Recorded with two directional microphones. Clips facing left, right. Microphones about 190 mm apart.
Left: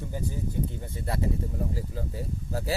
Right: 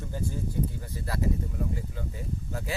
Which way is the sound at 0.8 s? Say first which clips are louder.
Left 1 dB; 25° left (ahead or behind).